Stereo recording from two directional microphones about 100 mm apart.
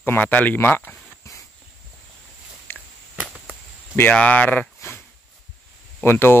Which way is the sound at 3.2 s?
15° right (ahead or behind).